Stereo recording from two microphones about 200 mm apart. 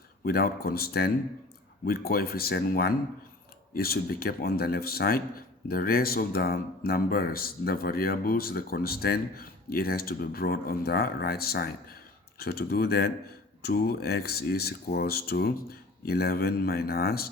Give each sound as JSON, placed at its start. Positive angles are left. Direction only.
{"t": 0.3, "sound": "speech", "side_deg": 50}